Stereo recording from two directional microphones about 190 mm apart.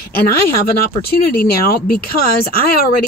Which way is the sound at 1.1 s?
50° left (ahead or behind).